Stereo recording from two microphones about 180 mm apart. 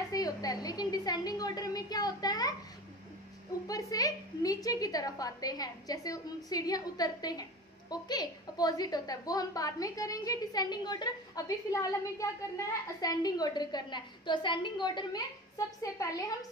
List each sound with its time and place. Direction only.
0.1 s a woman's voice: 20° left (ahead or behind)
3.6 s a woman's voice: 20° left (ahead or behind)